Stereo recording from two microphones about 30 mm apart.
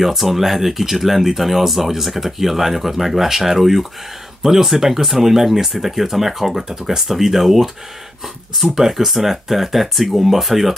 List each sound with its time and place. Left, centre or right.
0.0 s speech: centre
6.8 s speech: centre
7.1 s speech: centre
8.7 s speech: centre